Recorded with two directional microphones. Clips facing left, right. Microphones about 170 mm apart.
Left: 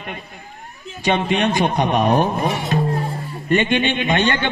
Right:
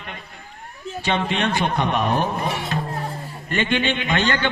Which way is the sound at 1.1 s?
15° left (ahead or behind).